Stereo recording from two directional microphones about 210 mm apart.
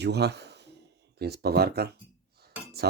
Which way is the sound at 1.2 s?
50° right (ahead or behind).